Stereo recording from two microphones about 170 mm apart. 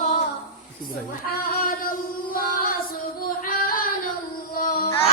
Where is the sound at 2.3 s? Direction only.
60° left (ahead or behind).